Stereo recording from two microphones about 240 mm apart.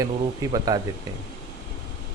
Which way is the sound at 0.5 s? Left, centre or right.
Centre.